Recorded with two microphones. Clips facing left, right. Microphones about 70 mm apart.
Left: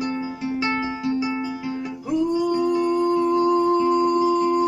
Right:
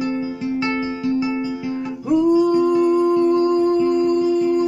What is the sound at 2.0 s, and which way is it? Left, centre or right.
Music, centre.